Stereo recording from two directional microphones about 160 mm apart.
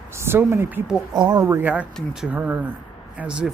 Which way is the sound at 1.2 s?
25° right (ahead or behind).